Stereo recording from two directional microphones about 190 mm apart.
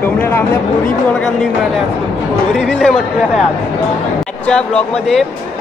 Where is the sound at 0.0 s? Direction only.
10° left (ahead or behind).